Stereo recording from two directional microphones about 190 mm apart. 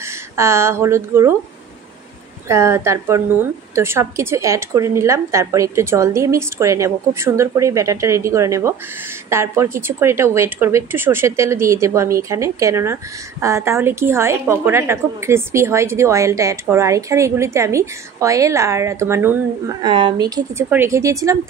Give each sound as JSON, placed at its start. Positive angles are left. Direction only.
{"t": 0.0, "sound": "speech", "side_deg": -15}
{"t": 2.4, "sound": "a woman's voice", "side_deg": -15}